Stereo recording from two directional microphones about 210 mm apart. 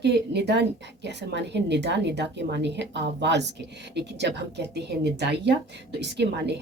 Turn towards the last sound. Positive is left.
turn(degrees=-55)  # may be behind; listen again after turning